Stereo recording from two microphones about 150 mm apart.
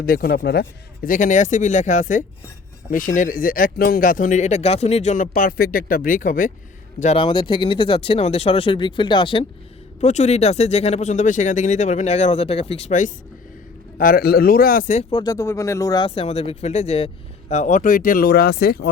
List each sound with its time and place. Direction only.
0.0 s speech: 85° left; by 6.5 s 65° left (ahead or behind)
7.2 s speech: 35° left (ahead or behind)
10.0 s speech: 50° left (ahead or behind)
14.0 s speech: 80° left; by 15.0 s 60° left (ahead or behind)
15.1 s speech: 25° left (ahead or behind)
16.0 s speech: 40° left (ahead or behind)
17.5 s speech: 55° left (ahead or behind); by 18.8 s 90° left